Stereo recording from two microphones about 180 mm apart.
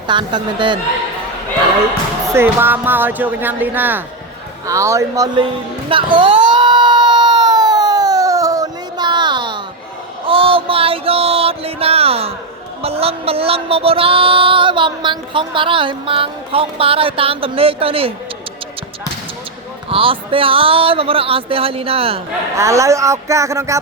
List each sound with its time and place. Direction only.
0.1 s speech: 25° right (ahead or behind)
2.3 s speech: 10° right (ahead or behind)
5.9 s a sound: 25° right (ahead or behind)
10.2 s music: 30° right (ahead or behind)
19.9 s music: 30° right (ahead or behind)
22.5 s speech: 15° right (ahead or behind)